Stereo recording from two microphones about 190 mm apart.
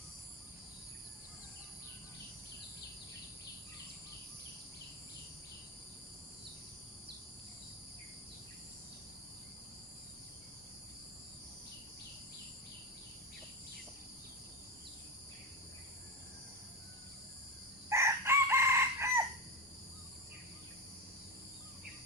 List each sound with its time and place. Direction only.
17.8 s chicken: 15° right (ahead or behind)